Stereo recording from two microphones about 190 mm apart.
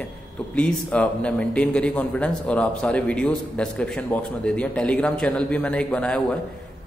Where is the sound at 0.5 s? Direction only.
5° left (ahead or behind).